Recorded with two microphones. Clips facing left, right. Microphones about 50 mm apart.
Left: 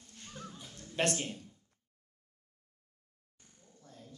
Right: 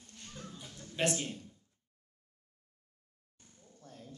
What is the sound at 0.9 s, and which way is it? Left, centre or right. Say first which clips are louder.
Speech: left 1 dB; left.